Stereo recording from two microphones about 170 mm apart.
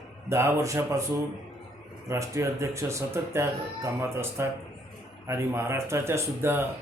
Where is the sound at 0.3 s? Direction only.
15° right (ahead or behind).